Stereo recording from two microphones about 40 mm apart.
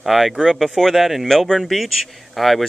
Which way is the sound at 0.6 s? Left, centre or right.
Centre.